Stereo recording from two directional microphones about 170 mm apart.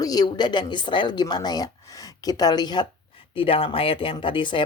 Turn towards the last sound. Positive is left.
turn(degrees=30)  # may be behind; listen again after turning